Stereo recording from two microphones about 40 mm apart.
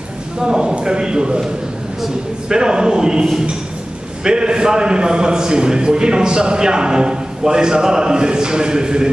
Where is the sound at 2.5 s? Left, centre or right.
Centre.